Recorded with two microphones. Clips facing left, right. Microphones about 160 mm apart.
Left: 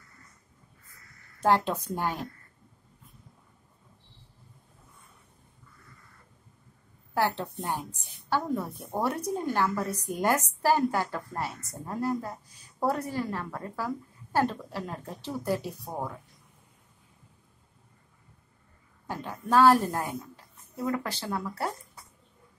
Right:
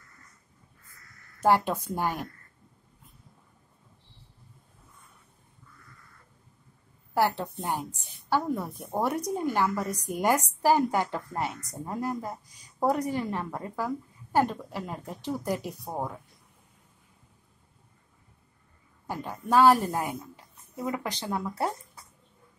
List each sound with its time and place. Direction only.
1.4 s a woman's voice: 10° right (ahead or behind)
7.2 s a woman's voice: 10° right (ahead or behind)
19.0 s a woman's voice: 10° right (ahead or behind)